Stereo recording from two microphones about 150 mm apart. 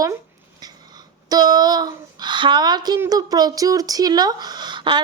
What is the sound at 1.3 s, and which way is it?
Speech, 25° right (ahead or behind).